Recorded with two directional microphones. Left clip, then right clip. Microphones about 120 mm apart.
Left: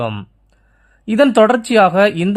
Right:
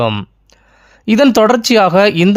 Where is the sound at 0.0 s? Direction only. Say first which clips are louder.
Right 7 dB; 35° right (ahead or behind).